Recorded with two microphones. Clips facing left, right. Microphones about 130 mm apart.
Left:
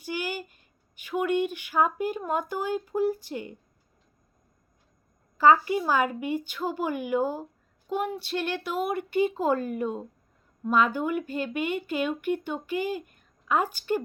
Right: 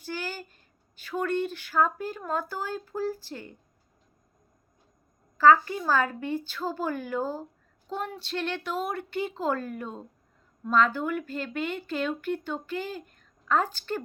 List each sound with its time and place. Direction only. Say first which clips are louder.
0.0 s speech: left 3 dB; 15° left (ahead or behind)
5.4 s a woman's voice: even; 15° left (ahead or behind)